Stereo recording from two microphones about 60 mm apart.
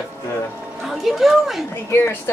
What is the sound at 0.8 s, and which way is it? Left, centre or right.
Speech, centre.